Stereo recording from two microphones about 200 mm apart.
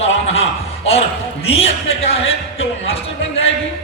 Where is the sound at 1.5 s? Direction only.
30° left (ahead or behind).